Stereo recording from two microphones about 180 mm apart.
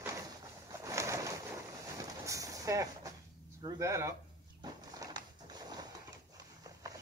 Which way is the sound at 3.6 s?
20° right (ahead or behind).